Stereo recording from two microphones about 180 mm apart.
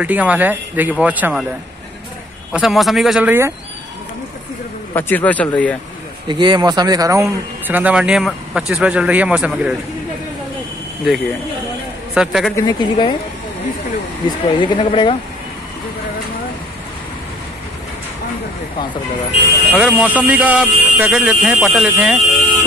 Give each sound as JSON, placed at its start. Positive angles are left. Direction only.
{"t": 0.0, "sound": "a man's voice", "side_deg": -10}
{"t": 2.5, "sound": "speech", "side_deg": 0}
{"t": 4.9, "sound": "speech", "side_deg": 10}
{"t": 6.2, "sound": "a man's voice", "side_deg": -25}
{"t": 12.1, "sound": "a man's voice", "side_deg": 0}
{"t": 12.5, "sound": "speech", "side_deg": 20}
{"t": 14.2, "sound": "speech", "side_deg": 25}
{"t": 19.7, "sound": "a man's voice", "side_deg": -5}